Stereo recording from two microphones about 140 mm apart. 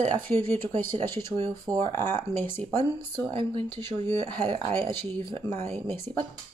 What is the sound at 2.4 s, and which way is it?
Speech, 15° left (ahead or behind).